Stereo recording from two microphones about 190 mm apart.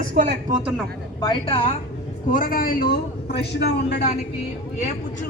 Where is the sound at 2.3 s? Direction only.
45° left (ahead or behind).